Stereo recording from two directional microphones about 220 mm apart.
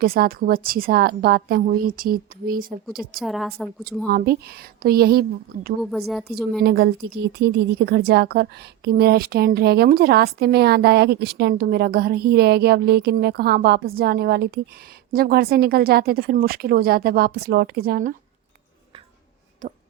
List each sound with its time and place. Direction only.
0.0 s a woman's voice: 45° right (ahead or behind)
3.2 s a woman's voice: centre (ahead or behind)
4.1 s a woman's voice: 45° right (ahead or behind)
6.1 s a woman's voice: centre (ahead or behind)
6.6 s a woman's voice: 45° right (ahead or behind)